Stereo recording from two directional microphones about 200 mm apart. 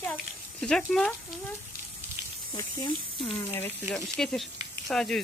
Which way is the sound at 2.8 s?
25° left (ahead or behind).